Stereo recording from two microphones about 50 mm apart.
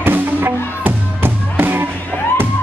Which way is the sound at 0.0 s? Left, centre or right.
Right.